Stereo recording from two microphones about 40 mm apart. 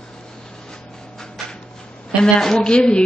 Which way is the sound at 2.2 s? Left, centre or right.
Centre.